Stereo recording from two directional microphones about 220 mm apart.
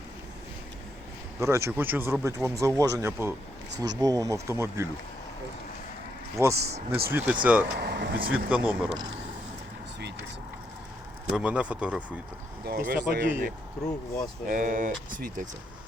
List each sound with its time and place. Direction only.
1.4 s speech: 15° right (ahead or behind)
6.4 s speech: 15° right (ahead or behind)
7.8 s speech: 50° right (ahead or behind)
8.3 s speech: 5° right (ahead or behind)
11.3 s speech: 5° right (ahead or behind)
12.6 s speech: 45° right (ahead or behind)